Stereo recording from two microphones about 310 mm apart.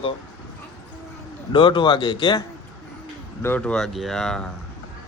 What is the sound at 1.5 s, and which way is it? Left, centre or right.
A man's voice, centre.